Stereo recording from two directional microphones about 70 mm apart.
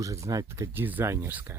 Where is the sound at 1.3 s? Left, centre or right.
Right.